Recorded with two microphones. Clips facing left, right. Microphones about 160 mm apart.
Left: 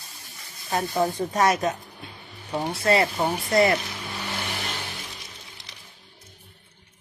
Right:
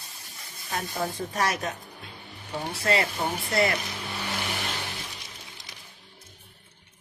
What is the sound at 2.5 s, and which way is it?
Speech, 40° left (ahead or behind).